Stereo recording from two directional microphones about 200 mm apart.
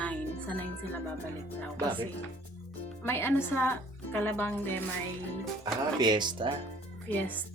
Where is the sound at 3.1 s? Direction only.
10° left (ahead or behind).